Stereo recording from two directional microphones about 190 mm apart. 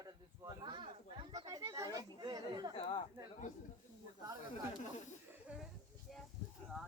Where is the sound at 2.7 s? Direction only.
30° left (ahead or behind).